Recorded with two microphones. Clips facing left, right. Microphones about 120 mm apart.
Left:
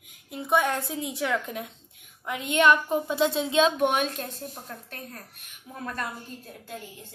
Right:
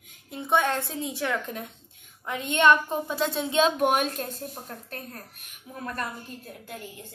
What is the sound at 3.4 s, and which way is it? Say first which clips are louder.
Speech: right 3 dB; centre (ahead or behind).